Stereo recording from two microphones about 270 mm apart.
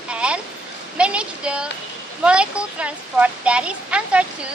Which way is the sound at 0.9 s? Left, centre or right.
Centre.